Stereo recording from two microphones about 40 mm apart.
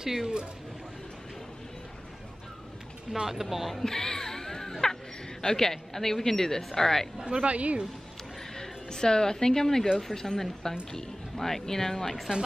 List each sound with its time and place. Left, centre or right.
0.0 s speech: centre
3.3 s speech: centre
3.8 s music: centre
5.4 s a woman's voice: centre
7.2 s speech: centre
7.4 s speech: right
8.5 s a woman's voice: centre